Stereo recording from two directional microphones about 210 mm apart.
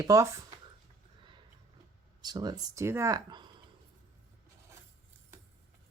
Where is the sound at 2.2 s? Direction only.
20° right (ahead or behind).